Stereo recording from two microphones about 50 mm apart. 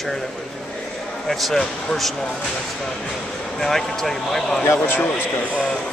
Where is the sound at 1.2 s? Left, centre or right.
Centre.